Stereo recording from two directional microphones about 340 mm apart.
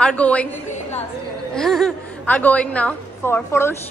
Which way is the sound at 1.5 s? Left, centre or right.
Centre.